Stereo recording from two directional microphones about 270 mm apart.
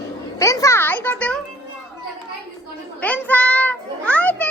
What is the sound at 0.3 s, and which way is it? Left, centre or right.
Music, centre.